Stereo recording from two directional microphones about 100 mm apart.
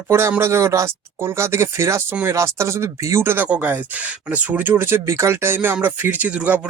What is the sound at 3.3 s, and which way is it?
Speech, 15° right (ahead or behind).